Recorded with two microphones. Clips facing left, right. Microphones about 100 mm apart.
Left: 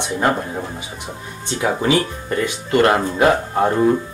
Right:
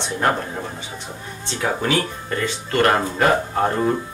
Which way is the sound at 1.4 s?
15° left (ahead or behind).